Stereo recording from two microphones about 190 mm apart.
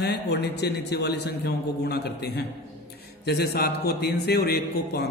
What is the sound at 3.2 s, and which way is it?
Speech, 55° left (ahead or behind).